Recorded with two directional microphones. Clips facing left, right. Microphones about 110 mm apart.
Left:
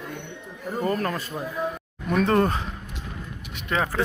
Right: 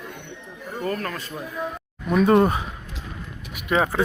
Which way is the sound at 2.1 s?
5° right (ahead or behind).